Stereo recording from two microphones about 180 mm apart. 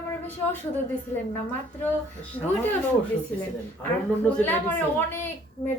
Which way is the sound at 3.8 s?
10° left (ahead or behind).